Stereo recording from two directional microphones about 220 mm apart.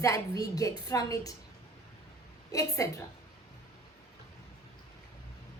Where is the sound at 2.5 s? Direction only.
15° left (ahead or behind).